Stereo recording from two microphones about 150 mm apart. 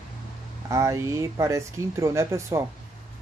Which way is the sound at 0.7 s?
20° right (ahead or behind).